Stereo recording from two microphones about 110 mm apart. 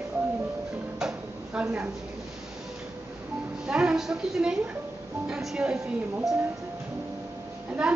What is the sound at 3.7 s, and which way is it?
A woman's voice, 10° right (ahead or behind).